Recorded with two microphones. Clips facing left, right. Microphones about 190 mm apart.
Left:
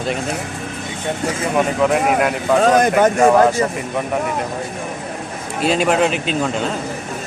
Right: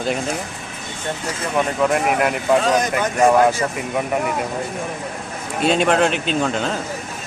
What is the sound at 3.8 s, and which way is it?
Speech, centre (ahead or behind).